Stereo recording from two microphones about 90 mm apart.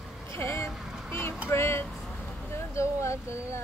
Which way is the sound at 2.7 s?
35° left (ahead or behind).